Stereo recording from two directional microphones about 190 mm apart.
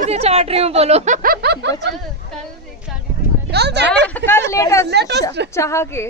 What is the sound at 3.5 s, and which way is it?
Speech, 60° right (ahead or behind).